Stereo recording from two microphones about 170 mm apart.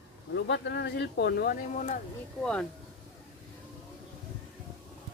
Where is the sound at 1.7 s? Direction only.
50° left (ahead or behind).